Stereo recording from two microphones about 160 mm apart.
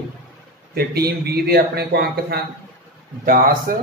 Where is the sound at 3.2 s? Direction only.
65° right (ahead or behind).